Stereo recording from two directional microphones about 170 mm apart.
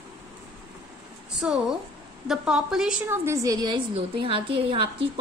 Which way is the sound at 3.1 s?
15° right (ahead or behind).